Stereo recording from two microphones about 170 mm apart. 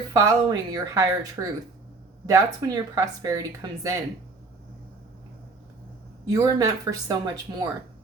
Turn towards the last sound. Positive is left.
turn(degrees=-25)  # may be behind; listen again after turning